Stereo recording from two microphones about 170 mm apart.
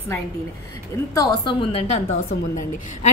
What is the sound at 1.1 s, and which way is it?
A woman's voice, 20° left (ahead or behind).